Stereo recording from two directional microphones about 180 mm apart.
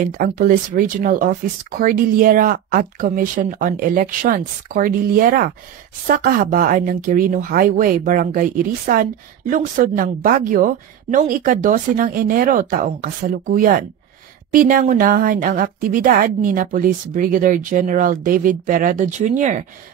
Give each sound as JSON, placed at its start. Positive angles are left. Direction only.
{"t": 0.0, "sound": "speech", "side_deg": -50}